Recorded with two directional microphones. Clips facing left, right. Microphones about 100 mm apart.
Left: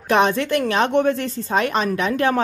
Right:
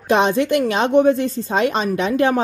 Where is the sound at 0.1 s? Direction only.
20° right (ahead or behind).